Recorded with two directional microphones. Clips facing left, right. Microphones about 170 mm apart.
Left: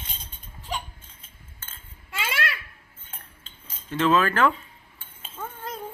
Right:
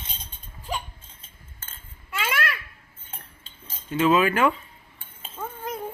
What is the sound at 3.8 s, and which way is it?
Speech, 10° right (ahead or behind).